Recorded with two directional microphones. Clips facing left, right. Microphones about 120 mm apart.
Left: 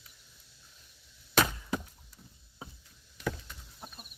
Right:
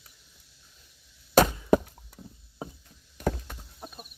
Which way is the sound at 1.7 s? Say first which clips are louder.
Right 13 dB; 60° right (ahead or behind).